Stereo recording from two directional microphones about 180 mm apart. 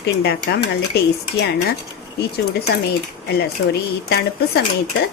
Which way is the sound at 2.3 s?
65° left (ahead or behind).